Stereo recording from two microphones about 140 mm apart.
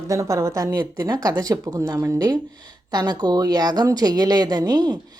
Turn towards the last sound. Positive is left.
turn(degrees=-30)  # may be behind; listen again after turning